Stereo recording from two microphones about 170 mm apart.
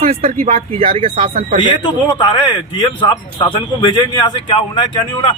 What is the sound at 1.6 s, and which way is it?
Speech, 30° left (ahead or behind).